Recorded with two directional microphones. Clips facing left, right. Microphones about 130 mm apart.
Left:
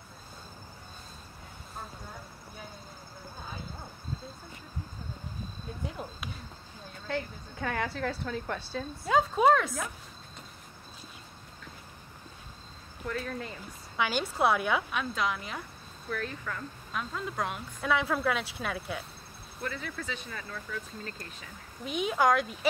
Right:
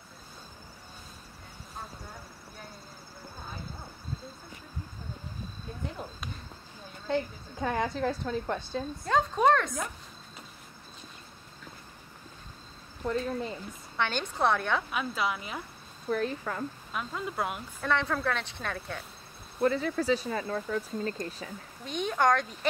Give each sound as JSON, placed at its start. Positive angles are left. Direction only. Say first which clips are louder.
{"t": 5.9, "sound": "speech", "louder": "even", "side_deg": 5}
{"t": 7.1, "sound": "speech", "louder": "right 4 dB", "side_deg": -15}
{"t": 9.0, "sound": "speech", "louder": "left 1 dB", "side_deg": 5}
{"t": 13.0, "sound": "speech", "louder": "right 5 dB", "side_deg": -20}
{"t": 13.9, "sound": "speech", "louder": "left 1 dB", "side_deg": 5}
{"t": 14.9, "sound": "speech", "louder": "even", "side_deg": -5}
{"t": 16.1, "sound": "speech", "louder": "right 6 dB", "side_deg": -35}
{"t": 16.9, "sound": "speech", "louder": "left 2 dB", "side_deg": -5}
{"t": 19.6, "sound": "speech", "louder": "right 11 dB", "side_deg": -40}
{"t": 21.8, "sound": "speech", "louder": "even", "side_deg": 5}